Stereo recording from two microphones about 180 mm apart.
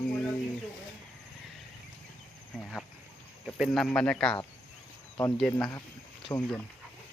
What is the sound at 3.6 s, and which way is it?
Speech, centre (ahead or behind).